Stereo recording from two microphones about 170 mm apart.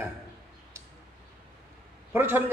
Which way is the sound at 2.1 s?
10° right (ahead or behind).